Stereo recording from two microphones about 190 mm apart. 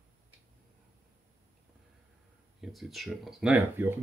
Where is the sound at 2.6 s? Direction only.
Centre (ahead or behind).